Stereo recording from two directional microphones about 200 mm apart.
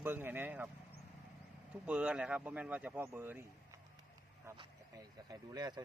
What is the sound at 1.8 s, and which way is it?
Speech, 5° right (ahead or behind).